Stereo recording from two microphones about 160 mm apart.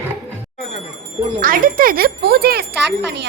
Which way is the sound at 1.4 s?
60° right (ahead or behind).